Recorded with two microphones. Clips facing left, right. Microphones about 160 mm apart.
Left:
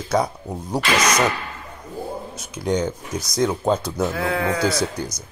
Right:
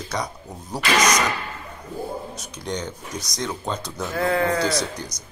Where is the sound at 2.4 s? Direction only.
5° left (ahead or behind).